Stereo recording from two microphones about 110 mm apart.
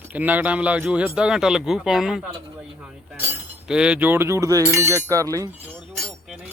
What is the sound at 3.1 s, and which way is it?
Chink, 15° right (ahead or behind).